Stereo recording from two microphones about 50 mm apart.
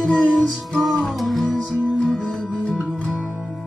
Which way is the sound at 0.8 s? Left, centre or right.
Centre.